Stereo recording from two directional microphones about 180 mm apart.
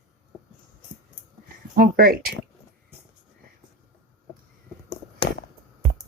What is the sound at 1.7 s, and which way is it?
Speech, 50° right (ahead or behind).